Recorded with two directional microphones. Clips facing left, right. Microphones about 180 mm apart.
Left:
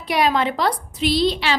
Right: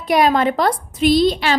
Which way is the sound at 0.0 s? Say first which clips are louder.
Right 4 dB; 45° right (ahead or behind).